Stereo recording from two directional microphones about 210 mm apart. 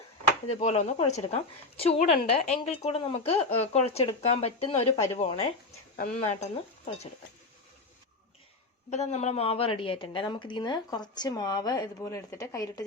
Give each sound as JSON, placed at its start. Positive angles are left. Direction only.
{"t": 0.5, "sound": "a woman's voice", "side_deg": 30}
{"t": 8.9, "sound": "a woman's voice", "side_deg": 30}